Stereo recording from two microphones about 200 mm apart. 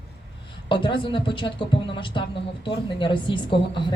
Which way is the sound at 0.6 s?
25° left (ahead or behind).